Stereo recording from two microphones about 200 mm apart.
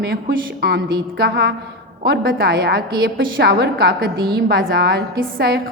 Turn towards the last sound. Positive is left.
turn(degrees=-55)  # may be behind; listen again after turning